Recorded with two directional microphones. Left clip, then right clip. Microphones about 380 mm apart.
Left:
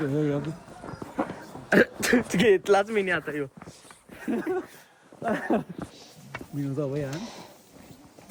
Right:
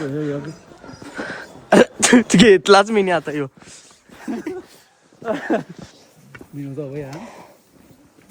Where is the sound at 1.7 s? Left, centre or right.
Centre.